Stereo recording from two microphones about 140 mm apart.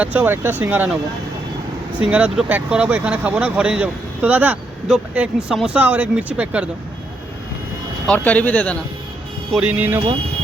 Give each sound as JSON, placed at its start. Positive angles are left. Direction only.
{"t": 0.0, "sound": "speech", "side_deg": -10}
{"t": 2.0, "sound": "speech", "side_deg": -10}
{"t": 8.0, "sound": "speech", "side_deg": 10}
{"t": 9.5, "sound": "speech", "side_deg": -10}